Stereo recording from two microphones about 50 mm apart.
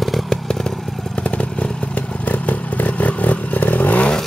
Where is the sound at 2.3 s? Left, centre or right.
Left.